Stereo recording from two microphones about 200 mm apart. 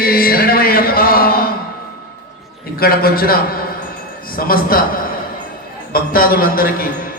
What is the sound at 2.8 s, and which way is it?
A man's voice, 50° left (ahead or behind).